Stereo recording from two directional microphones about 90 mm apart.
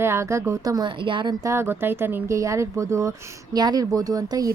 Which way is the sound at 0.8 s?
65° right (ahead or behind).